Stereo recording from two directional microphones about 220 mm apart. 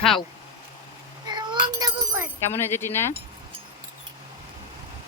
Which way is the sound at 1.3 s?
20° right (ahead or behind).